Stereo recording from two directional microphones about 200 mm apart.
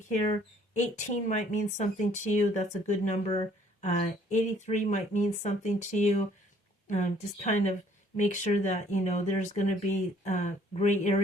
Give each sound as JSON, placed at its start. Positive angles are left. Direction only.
{"t": 0.1, "sound": "speech", "side_deg": 35}
{"t": 3.3, "sound": "a sound", "side_deg": 25}
{"t": 3.8, "sound": "speech", "side_deg": 35}